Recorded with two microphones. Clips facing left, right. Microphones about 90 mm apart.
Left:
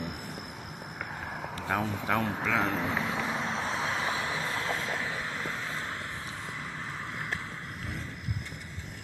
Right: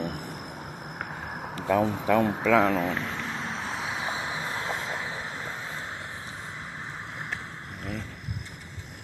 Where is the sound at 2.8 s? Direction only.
5° left (ahead or behind).